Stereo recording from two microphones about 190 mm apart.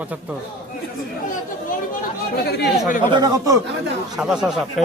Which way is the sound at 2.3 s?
60° left (ahead or behind).